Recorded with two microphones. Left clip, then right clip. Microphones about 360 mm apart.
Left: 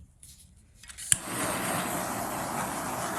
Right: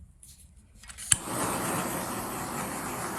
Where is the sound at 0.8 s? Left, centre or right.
Centre.